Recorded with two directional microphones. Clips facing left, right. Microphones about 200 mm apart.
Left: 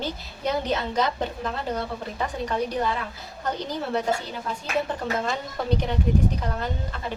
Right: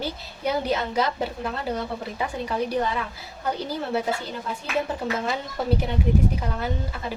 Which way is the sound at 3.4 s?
10° right (ahead or behind).